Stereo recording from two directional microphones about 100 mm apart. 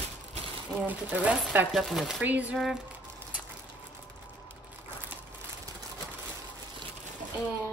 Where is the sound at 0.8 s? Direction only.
15° right (ahead or behind).